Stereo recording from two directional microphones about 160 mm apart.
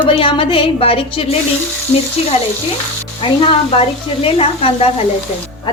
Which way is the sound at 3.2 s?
35° left (ahead or behind).